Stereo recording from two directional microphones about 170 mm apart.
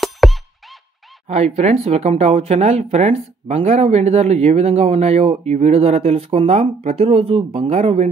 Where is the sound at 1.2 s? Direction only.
40° right (ahead or behind).